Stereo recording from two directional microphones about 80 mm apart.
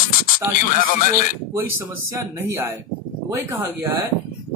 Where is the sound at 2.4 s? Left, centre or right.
Right.